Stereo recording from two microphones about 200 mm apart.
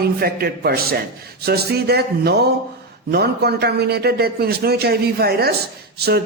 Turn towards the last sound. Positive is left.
turn(degrees=-50)  # may be behind; listen again after turning